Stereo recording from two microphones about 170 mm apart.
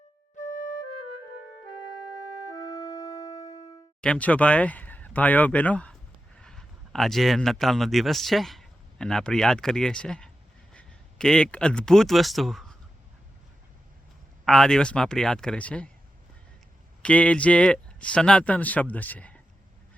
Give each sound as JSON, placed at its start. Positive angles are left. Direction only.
{"t": 2.5, "sound": "music", "side_deg": 20}
{"t": 4.0, "sound": "speech", "side_deg": 5}
{"t": 14.4, "sound": "speech", "side_deg": 0}
{"t": 17.0, "sound": "speech", "side_deg": 5}